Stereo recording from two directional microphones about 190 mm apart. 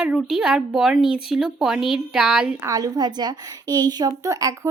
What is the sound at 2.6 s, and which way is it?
A woman's voice, 20° right (ahead or behind).